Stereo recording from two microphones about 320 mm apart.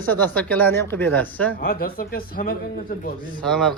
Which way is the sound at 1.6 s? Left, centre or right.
Left.